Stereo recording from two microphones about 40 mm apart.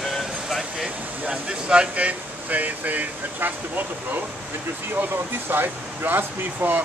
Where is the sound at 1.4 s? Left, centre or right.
Right.